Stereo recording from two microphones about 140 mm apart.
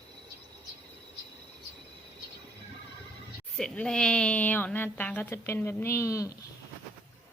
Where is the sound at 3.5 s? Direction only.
5° left (ahead or behind); by 6.3 s 20° left (ahead or behind).